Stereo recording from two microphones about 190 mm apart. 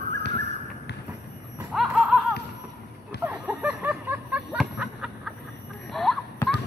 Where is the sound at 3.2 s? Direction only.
10° right (ahead or behind).